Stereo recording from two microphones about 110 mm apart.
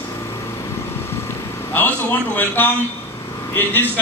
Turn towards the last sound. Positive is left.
turn(degrees=20)  # may be behind; listen again after turning